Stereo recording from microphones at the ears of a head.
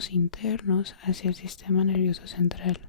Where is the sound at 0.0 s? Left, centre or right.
Left.